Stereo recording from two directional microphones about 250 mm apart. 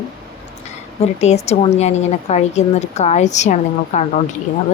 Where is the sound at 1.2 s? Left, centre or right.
Left.